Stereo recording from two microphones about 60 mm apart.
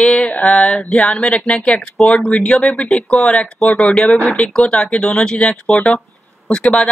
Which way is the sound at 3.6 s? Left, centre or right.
Centre.